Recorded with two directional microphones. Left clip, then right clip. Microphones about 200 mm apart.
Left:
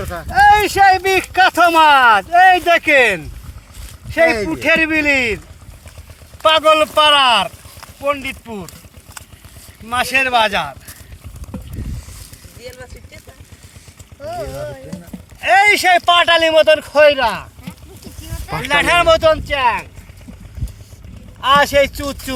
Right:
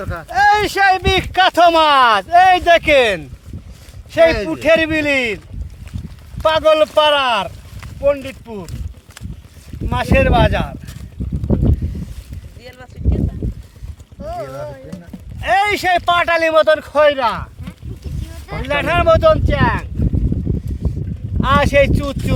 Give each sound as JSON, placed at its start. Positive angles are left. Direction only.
{"t": 0.0, "sound": "speech", "side_deg": 30}
{"t": 0.3, "sound": "speech", "side_deg": -40}
{"t": 4.4, "sound": "speech", "side_deg": -40}
{"t": 6.4, "sound": "speech", "side_deg": -50}
{"t": 9.9, "sound": "speech", "side_deg": -50}
{"t": 12.6, "sound": "boat", "side_deg": 15}
{"t": 15.4, "sound": "speech", "side_deg": -35}
{"t": 18.7, "sound": "speech", "side_deg": -50}
{"t": 21.4, "sound": "speech", "side_deg": -30}